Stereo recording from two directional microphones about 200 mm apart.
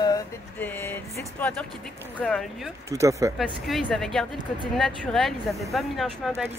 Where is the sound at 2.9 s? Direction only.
15° right (ahead or behind).